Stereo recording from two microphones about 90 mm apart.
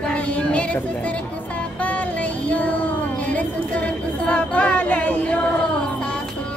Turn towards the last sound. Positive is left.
turn(degrees=15)  # may be behind; listen again after turning